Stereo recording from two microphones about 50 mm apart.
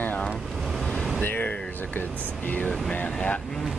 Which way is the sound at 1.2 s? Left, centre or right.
Left.